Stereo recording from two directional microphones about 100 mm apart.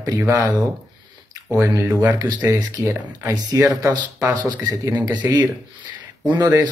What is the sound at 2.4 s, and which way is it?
Speech, 35° right (ahead or behind).